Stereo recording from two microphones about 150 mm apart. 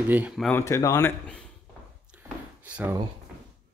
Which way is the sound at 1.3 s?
5° left (ahead or behind).